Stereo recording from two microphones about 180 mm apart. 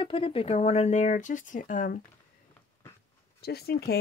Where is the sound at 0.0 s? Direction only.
30° left (ahead or behind); by 2.0 s 45° left (ahead or behind).